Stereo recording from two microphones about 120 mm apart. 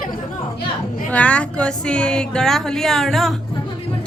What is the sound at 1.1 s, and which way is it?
A woman's voice, 10° left (ahead or behind).